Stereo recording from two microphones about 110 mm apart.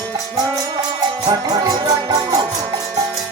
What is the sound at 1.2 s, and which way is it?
Music, 35° right (ahead or behind).